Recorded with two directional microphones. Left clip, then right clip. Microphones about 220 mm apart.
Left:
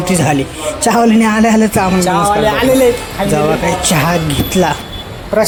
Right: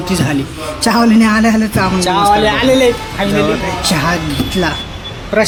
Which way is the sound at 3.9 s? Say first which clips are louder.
Right 1 dB; 20° left (ahead or behind).